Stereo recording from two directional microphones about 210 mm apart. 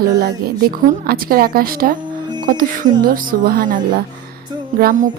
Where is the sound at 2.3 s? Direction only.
20° right (ahead or behind).